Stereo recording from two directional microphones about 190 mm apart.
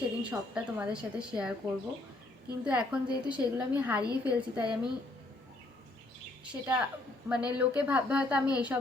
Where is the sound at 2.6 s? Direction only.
5° right (ahead or behind).